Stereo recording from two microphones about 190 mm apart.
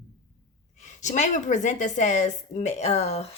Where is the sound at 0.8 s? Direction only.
40° left (ahead or behind).